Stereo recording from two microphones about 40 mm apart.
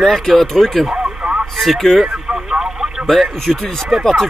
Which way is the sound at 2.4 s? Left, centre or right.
Centre.